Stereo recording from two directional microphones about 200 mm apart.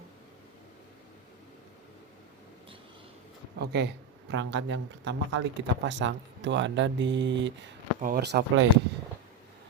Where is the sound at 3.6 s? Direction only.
55° right (ahead or behind).